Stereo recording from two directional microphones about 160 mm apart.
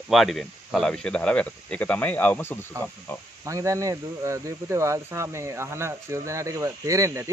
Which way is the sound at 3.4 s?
20° right (ahead or behind).